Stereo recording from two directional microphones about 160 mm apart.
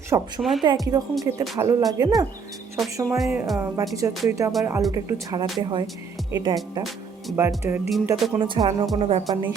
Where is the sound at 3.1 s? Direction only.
Centre (ahead or behind).